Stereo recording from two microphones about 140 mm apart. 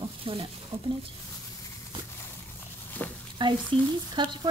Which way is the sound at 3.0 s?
10° left (ahead or behind).